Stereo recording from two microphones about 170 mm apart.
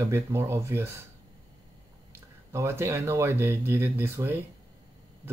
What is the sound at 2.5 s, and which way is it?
Speech, 15° right (ahead or behind).